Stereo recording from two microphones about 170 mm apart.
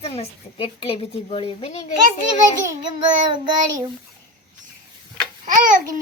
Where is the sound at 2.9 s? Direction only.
25° right (ahead or behind).